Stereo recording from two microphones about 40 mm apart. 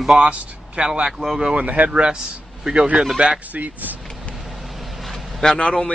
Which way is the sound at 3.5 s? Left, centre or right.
Right.